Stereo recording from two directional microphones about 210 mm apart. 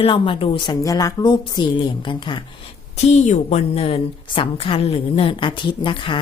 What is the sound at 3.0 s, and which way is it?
A woman's voice, 30° left (ahead or behind).